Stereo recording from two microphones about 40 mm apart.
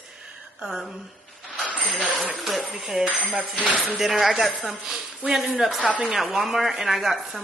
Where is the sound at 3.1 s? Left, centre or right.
Left.